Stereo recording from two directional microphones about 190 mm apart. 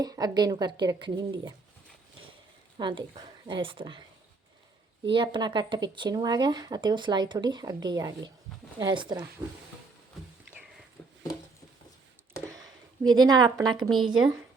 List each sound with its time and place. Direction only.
0.0 s speech: 20° right (ahead or behind)
2.7 s a woman's voice: 25° right (ahead or behind)
5.1 s speech: 25° right (ahead or behind)
12.5 s speech: 20° right (ahead or behind)
13.9 s speech: centre (ahead or behind)